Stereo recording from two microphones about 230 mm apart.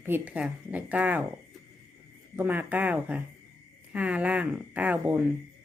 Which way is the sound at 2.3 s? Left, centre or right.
Centre.